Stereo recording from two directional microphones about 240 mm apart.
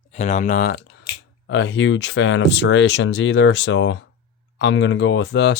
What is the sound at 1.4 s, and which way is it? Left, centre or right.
Speech, left.